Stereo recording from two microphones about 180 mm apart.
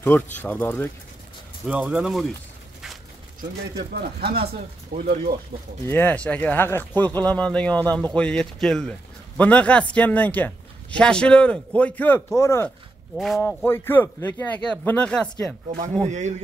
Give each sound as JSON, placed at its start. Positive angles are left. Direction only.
{"t": 0.0, "sound": "a man's voice", "side_deg": 10}
{"t": 1.7, "sound": "speech", "side_deg": -5}
{"t": 3.7, "sound": "speech", "side_deg": -60}
{"t": 5.5, "sound": "speech", "side_deg": -25}
{"t": 5.9, "sound": "a man's voice", "side_deg": 10}
{"t": 13.1, "sound": "speech", "side_deg": 0}
{"t": 13.7, "sound": "a man's voice", "side_deg": 10}
{"t": 16.1, "sound": "a man's voice", "side_deg": -40}